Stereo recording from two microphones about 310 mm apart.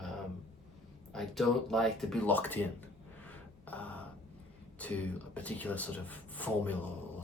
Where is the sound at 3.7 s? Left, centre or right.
Centre.